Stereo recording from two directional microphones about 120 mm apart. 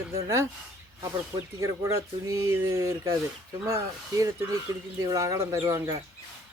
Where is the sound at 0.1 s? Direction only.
25° right (ahead or behind).